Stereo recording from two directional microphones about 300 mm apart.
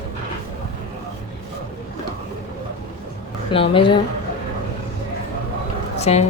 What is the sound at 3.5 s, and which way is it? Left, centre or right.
Speech, centre.